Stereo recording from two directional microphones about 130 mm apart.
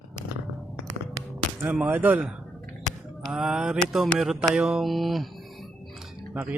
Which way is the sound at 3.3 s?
5° right (ahead or behind).